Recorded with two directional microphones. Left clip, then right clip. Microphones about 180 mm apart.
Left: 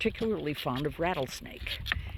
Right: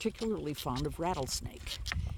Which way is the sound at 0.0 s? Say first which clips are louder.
Left 5 dB; centre (ahead or behind).